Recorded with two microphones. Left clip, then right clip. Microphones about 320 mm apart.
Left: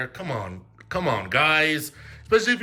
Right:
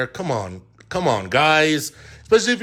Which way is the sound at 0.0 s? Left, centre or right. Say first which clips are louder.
Right 6 dB; centre.